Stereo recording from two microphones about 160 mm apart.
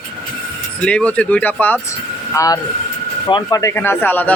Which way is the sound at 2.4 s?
20° left (ahead or behind).